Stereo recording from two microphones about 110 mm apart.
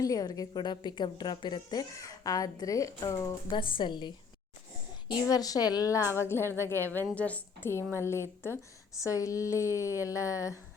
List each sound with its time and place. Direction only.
0.0 s a woman's voice: 35° left (ahead or behind)
3.5 s a woman's voice: 45° left (ahead or behind)
5.3 s a woman's voice: 35° left (ahead or behind); by 7.7 s 15° left (ahead or behind)
8.0 s speech: 25° left (ahead or behind)